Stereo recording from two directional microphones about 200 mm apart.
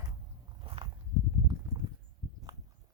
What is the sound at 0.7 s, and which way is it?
Walk, 25° right (ahead or behind).